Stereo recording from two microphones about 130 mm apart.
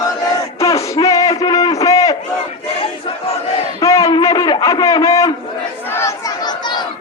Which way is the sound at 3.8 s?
25° left (ahead or behind).